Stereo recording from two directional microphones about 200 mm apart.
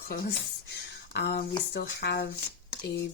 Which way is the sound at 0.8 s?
55° left (ahead or behind).